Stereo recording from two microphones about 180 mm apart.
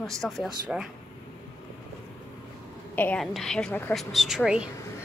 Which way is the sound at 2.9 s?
10° left (ahead or behind).